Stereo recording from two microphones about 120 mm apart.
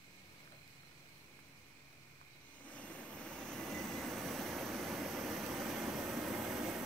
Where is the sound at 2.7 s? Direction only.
10° left (ahead or behind).